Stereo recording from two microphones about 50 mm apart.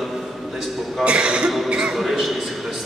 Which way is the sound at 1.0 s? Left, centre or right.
Centre.